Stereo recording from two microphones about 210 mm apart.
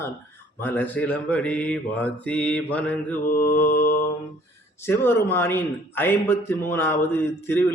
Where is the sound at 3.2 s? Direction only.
45° left (ahead or behind).